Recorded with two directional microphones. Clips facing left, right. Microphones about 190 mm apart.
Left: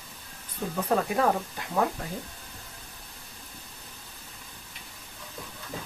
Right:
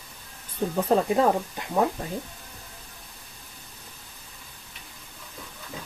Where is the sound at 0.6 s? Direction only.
35° right (ahead or behind).